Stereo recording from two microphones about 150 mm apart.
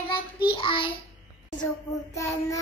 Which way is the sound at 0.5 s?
35° left (ahead or behind).